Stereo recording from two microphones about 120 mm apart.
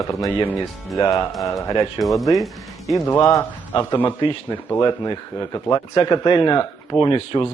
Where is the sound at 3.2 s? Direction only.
25° left (ahead or behind).